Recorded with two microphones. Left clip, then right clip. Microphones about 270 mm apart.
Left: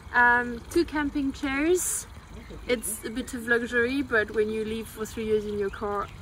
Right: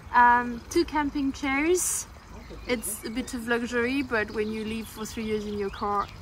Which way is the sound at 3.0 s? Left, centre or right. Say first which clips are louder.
Even; right.